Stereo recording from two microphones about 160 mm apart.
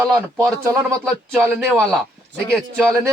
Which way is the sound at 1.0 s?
5° right (ahead or behind).